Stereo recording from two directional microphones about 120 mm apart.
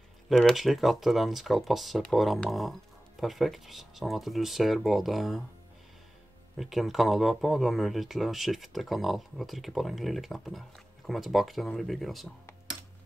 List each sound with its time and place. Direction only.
0.3 s speech: centre (ahead or behind)
6.6 s speech: centre (ahead or behind)